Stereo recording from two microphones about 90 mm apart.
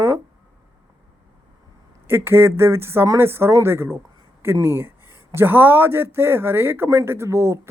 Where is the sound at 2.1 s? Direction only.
25° right (ahead or behind).